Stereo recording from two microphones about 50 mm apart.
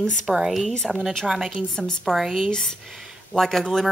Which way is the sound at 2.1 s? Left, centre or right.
Centre.